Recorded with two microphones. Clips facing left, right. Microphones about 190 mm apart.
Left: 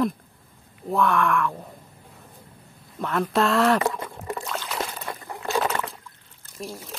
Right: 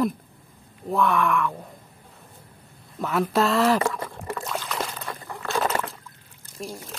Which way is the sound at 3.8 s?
20° left (ahead or behind).